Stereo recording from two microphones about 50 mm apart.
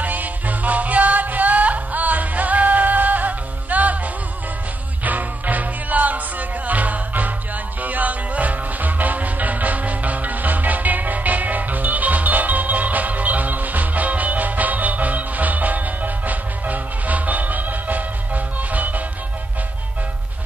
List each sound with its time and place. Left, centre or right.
0.0 s music: right
5.0 s music: right